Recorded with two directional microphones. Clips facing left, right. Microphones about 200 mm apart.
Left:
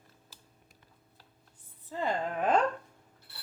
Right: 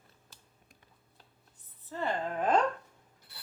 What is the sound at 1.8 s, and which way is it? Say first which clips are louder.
Speech: left 1 dB; 15° left (ahead or behind).